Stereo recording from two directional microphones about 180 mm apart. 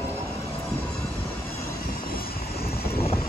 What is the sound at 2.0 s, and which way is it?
Vehicle, 55° left (ahead or behind).